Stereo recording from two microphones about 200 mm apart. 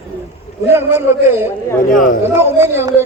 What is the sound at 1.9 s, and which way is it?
Speech, 40° left (ahead or behind).